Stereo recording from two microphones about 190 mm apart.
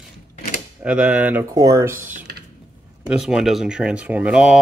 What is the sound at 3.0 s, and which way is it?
Speech, 5° right (ahead or behind).